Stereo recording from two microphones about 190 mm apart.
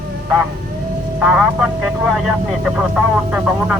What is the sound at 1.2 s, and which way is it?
Speech, 5° right (ahead or behind).